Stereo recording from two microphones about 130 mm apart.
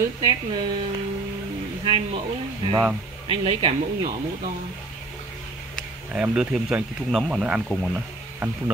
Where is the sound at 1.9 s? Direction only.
40° right (ahead or behind).